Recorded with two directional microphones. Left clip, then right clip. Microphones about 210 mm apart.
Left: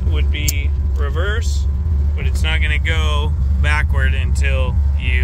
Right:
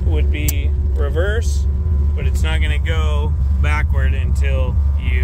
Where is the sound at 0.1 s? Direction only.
30° right (ahead or behind).